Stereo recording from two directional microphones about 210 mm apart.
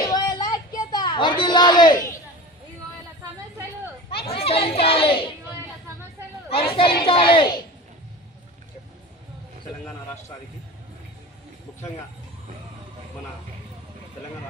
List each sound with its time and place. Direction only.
0.1 s a sound: 20° left (ahead or behind)
4.3 s children playing: 30° left (ahead or behind)
4.6 s child singing: 25° left (ahead or behind)
6.5 s chatter: 25° left (ahead or behind)
7.0 s speech: 25° left (ahead or behind)